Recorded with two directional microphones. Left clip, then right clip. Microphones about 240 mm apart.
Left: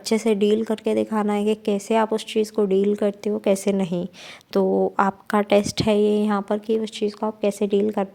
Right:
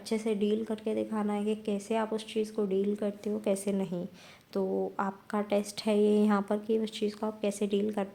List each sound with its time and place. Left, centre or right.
0.0 s a woman's voice: left